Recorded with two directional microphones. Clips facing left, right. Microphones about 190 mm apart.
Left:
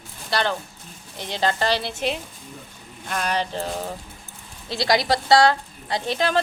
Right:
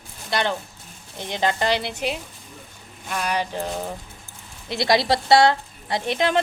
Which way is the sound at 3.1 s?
10° right (ahead or behind).